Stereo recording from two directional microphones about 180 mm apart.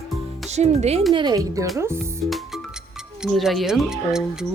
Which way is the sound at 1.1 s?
25° right (ahead or behind).